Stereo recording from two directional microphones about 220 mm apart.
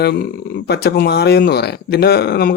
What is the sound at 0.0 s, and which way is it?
Speech, 45° left (ahead or behind).